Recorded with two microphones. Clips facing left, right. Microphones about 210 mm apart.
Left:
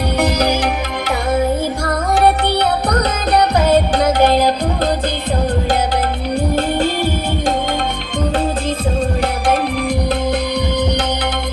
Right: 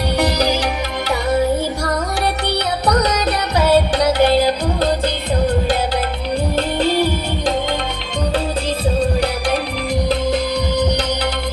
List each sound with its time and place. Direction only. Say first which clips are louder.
0.2 s music: left 2 dB; 55° left (ahead or behind)
2.1 s music: left 6 dB; 55° left (ahead or behind)
6.7 s music: right 1 dB; 50° left (ahead or behind)